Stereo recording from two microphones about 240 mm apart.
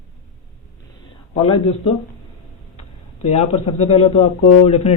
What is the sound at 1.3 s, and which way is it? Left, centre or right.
Speech, left.